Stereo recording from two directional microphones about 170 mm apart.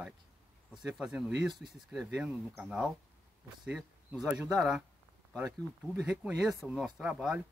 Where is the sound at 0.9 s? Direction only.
5° right (ahead or behind).